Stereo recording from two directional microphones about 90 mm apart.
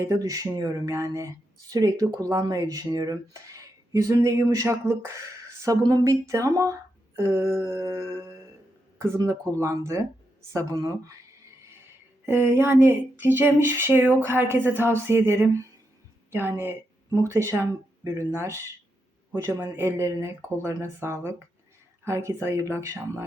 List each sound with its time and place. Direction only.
0.0 s speech: 35° right (ahead or behind)
5.6 s speech: 45° right (ahead or behind)
12.2 s speech: 25° right (ahead or behind)